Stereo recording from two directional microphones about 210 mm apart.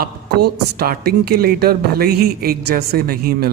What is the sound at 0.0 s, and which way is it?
Speech, 50° right (ahead or behind).